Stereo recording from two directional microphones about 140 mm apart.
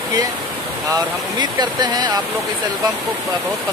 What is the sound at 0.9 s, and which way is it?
Speech, 30° right (ahead or behind).